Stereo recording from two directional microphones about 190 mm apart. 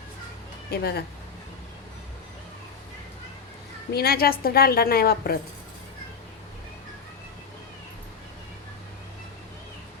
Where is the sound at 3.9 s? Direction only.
55° left (ahead or behind).